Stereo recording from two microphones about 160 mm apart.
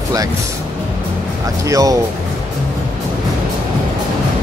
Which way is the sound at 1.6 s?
20° right (ahead or behind).